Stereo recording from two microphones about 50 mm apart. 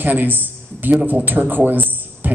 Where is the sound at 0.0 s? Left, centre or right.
Right.